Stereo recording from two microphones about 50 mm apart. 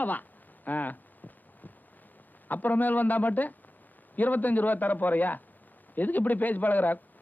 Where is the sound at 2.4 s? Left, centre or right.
Left.